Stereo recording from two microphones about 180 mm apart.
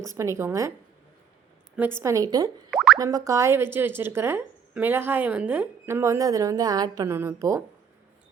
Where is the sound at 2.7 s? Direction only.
5° right (ahead or behind).